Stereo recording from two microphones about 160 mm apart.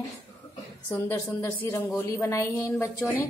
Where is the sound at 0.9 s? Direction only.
20° left (ahead or behind).